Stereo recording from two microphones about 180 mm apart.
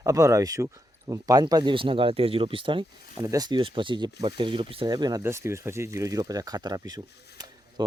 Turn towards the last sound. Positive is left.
turn(degrees=-20)  # may be behind; listen again after turning